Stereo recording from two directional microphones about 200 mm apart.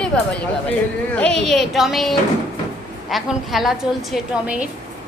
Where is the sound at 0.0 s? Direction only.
5° left (ahead or behind).